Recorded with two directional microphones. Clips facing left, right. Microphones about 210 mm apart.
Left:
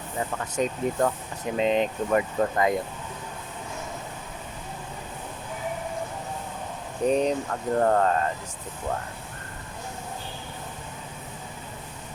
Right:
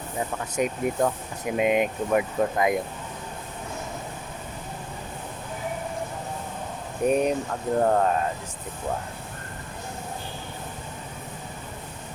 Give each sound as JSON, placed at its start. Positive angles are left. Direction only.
{"t": 0.2, "sound": "speech", "side_deg": -10}
{"t": 7.0, "sound": "speech", "side_deg": -10}